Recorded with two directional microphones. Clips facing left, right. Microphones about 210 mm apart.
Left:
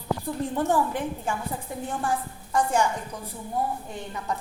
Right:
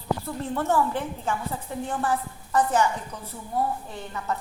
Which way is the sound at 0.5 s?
15° left (ahead or behind).